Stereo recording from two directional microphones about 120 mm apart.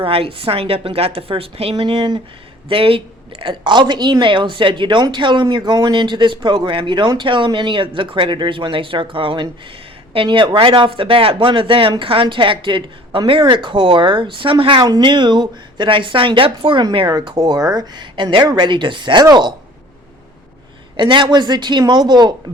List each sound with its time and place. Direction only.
0.0 s a woman's voice: 50° right (ahead or behind); by 19.5 s 35° right (ahead or behind)
20.9 s speech: 40° right (ahead or behind)